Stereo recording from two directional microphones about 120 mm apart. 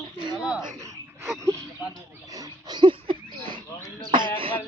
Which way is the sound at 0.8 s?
25° right (ahead or behind).